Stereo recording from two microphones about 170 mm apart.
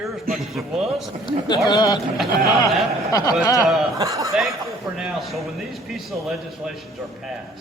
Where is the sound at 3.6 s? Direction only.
Centre (ahead or behind).